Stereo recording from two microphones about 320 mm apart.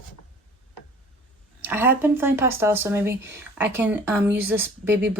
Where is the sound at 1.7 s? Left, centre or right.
Centre.